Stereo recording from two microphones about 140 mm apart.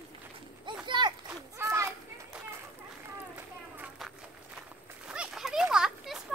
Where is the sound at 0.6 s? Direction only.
35° right (ahead or behind).